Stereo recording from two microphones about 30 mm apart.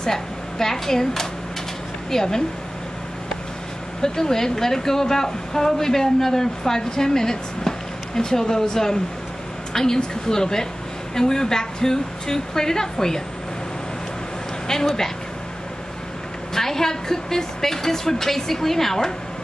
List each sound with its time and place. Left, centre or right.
0.0 s speech: centre
4.0 s speech: centre
9.7 s a sound: centre
9.9 s a woman's voice: left
16.5 s speech: centre